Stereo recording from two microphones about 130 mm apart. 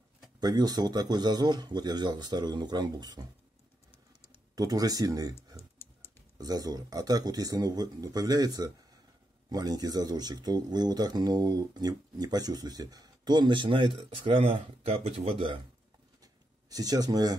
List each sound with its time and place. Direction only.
0.4 s speech: 30° right (ahead or behind)
4.6 s speech: 30° right (ahead or behind)
6.3 s speech: 30° right (ahead or behind)
16.2 s a sound: 30° right (ahead or behind)